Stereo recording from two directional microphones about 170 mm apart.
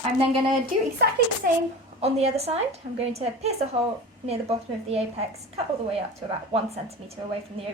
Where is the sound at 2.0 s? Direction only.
35° right (ahead or behind).